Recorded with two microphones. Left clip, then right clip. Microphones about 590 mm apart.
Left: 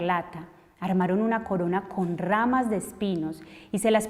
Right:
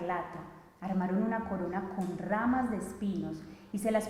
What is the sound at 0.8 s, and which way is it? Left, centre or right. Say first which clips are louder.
A woman's voice: left 8 dB; left.